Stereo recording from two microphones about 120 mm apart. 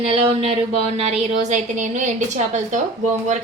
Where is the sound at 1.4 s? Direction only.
80° right.